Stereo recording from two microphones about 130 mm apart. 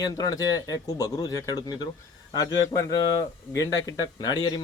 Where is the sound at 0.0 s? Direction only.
30° left (ahead or behind).